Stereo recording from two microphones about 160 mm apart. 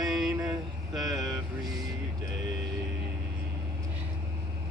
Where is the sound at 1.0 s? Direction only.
20° right (ahead or behind).